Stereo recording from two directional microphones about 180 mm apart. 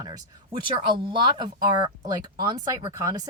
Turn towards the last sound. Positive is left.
turn(degrees=-20)  # may be behind; listen again after turning